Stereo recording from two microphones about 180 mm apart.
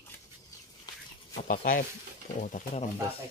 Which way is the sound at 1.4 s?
50° left (ahead or behind).